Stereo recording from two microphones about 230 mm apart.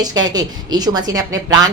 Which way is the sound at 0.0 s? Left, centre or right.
Centre.